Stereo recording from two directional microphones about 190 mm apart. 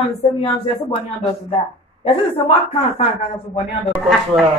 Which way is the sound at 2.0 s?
30° left (ahead or behind).